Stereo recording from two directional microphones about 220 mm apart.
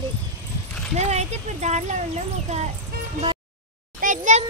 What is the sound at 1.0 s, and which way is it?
Speech, 30° right (ahead or behind).